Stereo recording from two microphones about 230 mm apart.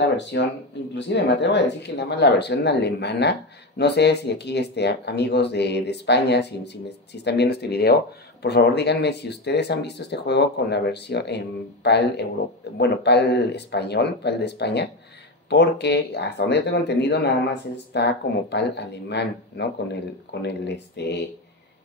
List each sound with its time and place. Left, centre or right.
0.2 s speech: left